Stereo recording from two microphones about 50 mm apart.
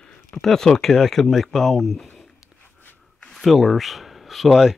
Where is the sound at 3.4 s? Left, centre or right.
Centre.